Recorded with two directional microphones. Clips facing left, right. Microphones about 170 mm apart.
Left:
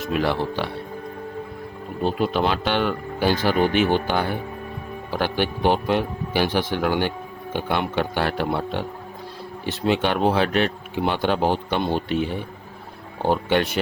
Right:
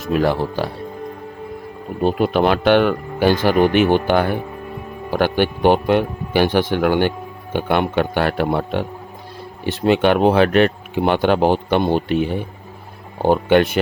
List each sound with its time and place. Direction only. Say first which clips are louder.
0.1 s speech: right 5 dB; 45° right (ahead or behind)
2.1 s speech: right 5 dB; 60° right (ahead or behind)
13.2 s speech: right 6 dB; 55° right (ahead or behind)